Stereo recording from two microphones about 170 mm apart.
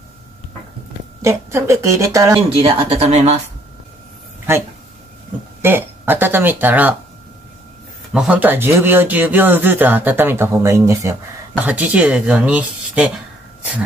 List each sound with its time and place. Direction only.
1.2 s speech: 15° right (ahead or behind)
2.5 s speech: 30° right (ahead or behind)
5.6 s speech: 15° right (ahead or behind)
8.1 s speech: 5° right (ahead or behind)